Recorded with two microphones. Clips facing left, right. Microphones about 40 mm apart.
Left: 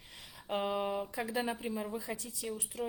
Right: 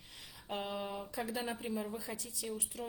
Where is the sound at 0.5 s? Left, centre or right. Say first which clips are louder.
Left 6 dB; left.